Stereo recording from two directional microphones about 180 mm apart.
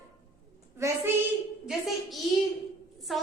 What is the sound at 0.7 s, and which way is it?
Speech, 15° right (ahead or behind).